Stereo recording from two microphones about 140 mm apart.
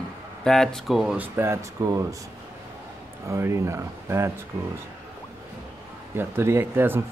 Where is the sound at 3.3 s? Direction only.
20° right (ahead or behind).